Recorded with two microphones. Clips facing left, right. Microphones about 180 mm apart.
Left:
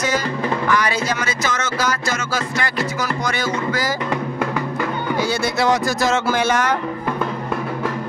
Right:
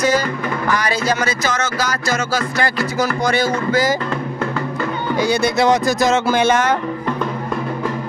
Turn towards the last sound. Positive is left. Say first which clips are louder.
# right 3 dB
turn(degrees=-25)  # may be behind; listen again after turning